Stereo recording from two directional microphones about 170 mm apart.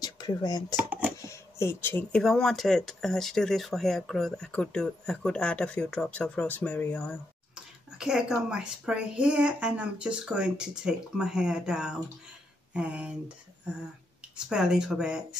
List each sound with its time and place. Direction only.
0.0 s speech: 20° left (ahead or behind)
0.7 s a sound: 5° right (ahead or behind)
1.2 s speech: 15° left (ahead or behind)
8.0 s speech: 5° right (ahead or behind)
14.3 s speech: 5° right (ahead or behind)